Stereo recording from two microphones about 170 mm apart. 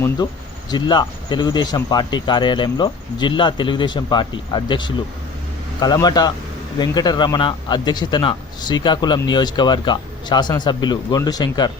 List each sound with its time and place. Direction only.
0.7 s speech: 25° left (ahead or behind)